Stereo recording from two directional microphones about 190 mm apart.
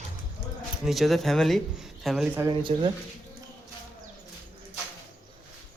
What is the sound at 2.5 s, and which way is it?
Speech, 25° right (ahead or behind).